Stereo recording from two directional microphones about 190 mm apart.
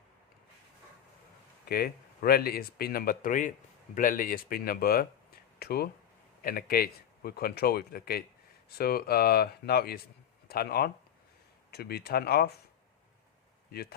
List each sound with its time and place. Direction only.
1.6 s speech: 50° left (ahead or behind)